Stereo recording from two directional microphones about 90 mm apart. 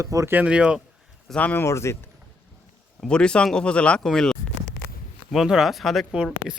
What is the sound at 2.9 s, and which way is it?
Speech, 10° left (ahead or behind).